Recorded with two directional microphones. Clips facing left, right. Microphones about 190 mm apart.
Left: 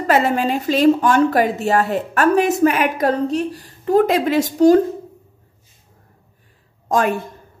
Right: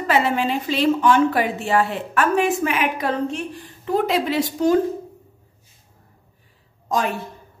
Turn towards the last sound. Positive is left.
turn(degrees=50)  # may be behind; listen again after turning